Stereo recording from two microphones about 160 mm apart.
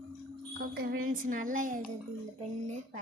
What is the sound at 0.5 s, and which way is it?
Speech, 75° right (ahead or behind).